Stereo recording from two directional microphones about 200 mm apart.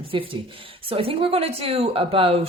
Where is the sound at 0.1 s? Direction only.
25° right (ahead or behind).